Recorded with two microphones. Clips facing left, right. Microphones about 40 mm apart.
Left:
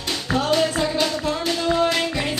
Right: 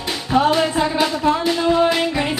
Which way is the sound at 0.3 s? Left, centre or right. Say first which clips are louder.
Right 4 dB; centre.